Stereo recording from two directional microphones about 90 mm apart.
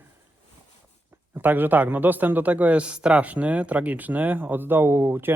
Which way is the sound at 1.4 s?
20° right (ahead or behind).